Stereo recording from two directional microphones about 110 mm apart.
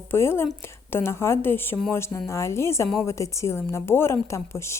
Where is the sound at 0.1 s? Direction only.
20° left (ahead or behind).